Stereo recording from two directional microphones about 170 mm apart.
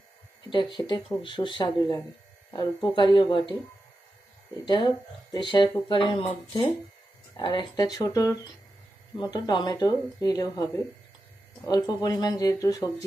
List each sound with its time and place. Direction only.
0.5 s speech: 25° left (ahead or behind)
4.6 s speech: 25° left (ahead or behind)
7.3 s speech: 25° left (ahead or behind)
11.6 s speech: 20° left (ahead or behind)